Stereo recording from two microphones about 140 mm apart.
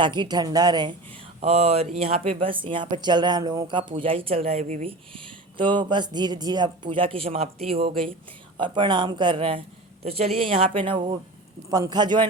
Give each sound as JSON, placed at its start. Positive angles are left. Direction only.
{"t": 0.0, "sound": "speech", "side_deg": -35}
{"t": 1.4, "sound": "speech", "side_deg": -45}